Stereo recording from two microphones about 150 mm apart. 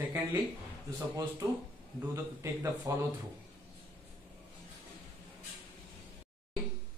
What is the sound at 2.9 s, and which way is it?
Speech, 20° right (ahead or behind).